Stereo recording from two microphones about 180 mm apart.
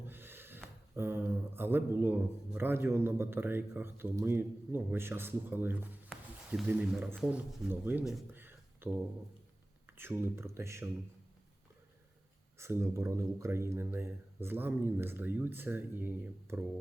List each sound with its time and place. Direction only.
0.1 s speech: 10° right (ahead or behind)
6.1 s a sound: 5° left (ahead or behind)
6.5 s speech: 5° right (ahead or behind)
12.5 s speech: 15° right (ahead or behind)